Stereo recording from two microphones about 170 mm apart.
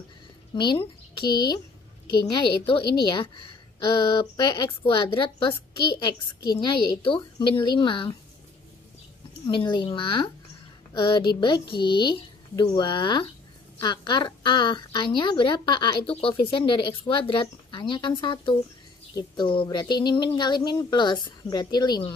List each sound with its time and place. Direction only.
0.6 s a woman's voice: 30° left (ahead or behind)
9.5 s a woman's voice: 25° left (ahead or behind)